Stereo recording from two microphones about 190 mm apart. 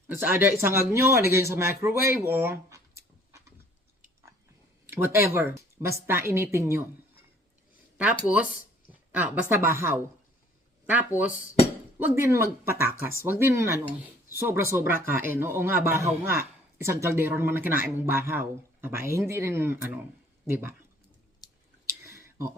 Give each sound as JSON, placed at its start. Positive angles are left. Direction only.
{"t": 0.1, "sound": "a man's voice", "side_deg": -10}
{"t": 4.9, "sound": "a man's voice", "side_deg": -10}
{"t": 8.9, "sound": "a woman's voice", "side_deg": -10}
{"t": 22.0, "sound": "a sound", "side_deg": -15}